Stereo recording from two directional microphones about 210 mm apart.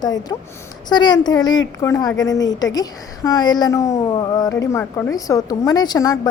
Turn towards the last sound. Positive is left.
turn(degrees=20)  # may be behind; listen again after turning